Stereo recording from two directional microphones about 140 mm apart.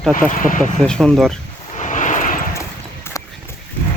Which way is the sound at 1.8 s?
65° left (ahead or behind).